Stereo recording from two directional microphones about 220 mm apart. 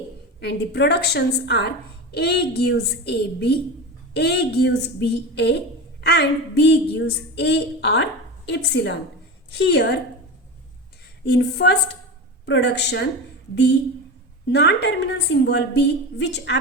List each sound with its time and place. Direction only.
0.3 s a woman's voice: 50° left (ahead or behind)
11.3 s a woman's voice: 50° left (ahead or behind)
14.5 s a woman's voice: 50° left (ahead or behind)